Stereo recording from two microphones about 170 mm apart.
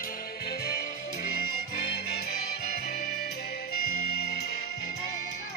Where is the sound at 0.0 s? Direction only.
60° left (ahead or behind).